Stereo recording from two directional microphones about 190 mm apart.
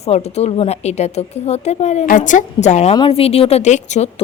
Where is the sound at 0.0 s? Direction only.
35° left (ahead or behind).